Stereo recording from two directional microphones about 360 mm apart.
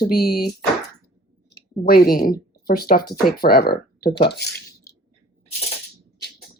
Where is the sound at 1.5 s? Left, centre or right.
Left.